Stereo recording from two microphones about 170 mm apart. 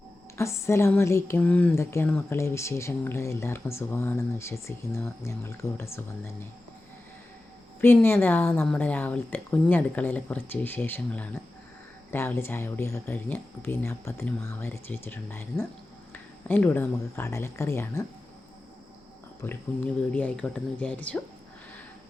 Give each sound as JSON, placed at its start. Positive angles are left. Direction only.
{"t": 0.3, "sound": "a woman's voice", "side_deg": 15}
{"t": 7.8, "sound": "a woman's voice", "side_deg": 10}
{"t": 19.4, "sound": "a woman's voice", "side_deg": 10}